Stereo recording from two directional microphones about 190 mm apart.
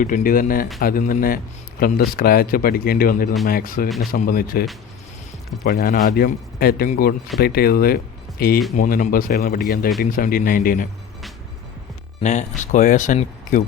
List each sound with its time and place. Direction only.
0.0 s a man's voice: 45° left (ahead or behind)
5.6 s a man's voice: 50° left (ahead or behind)
12.2 s speech: 40° left (ahead or behind)